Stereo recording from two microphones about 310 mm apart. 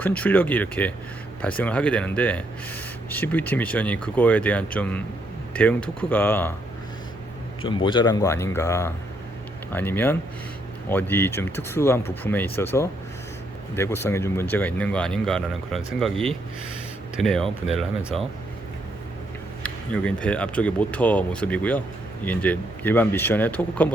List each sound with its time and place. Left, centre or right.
0.0 s speech: centre
7.6 s speech: centre
19.6 s speech: centre